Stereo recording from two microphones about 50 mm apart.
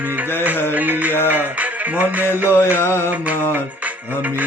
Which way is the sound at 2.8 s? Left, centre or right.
Left.